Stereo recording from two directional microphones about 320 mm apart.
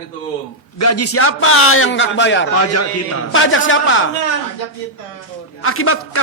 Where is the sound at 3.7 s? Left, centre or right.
Left.